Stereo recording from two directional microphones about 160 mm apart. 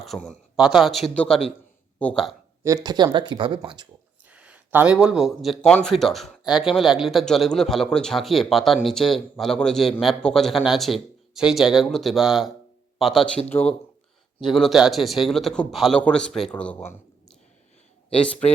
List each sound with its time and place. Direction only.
0.0 s speech: centre (ahead or behind)
2.6 s speech: 25° right (ahead or behind)
4.3 s speech: 10° right (ahead or behind)
14.4 s speech: centre (ahead or behind)